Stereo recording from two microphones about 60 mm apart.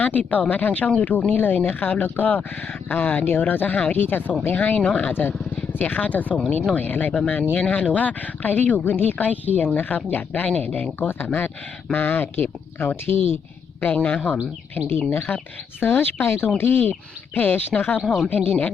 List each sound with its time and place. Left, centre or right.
0.0 s a woman's voice: left
13.8 s a woman's voice: left
14.8 s speech: left
18.0 s speech: centre
18.3 s a woman's voice: left